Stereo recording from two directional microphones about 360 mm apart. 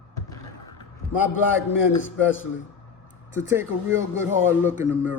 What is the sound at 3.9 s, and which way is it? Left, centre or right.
Speech, centre.